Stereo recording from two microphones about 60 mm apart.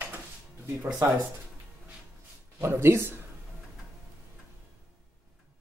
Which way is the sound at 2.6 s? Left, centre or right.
Right.